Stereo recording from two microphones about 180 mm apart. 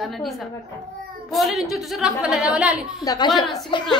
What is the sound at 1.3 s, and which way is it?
A woman's voice, centre (ahead or behind).